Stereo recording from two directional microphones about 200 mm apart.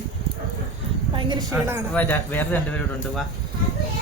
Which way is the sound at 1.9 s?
10° left (ahead or behind).